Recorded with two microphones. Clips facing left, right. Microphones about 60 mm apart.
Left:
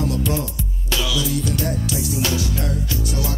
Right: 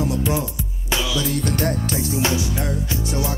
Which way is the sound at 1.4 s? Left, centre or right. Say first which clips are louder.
Right 1 dB; right.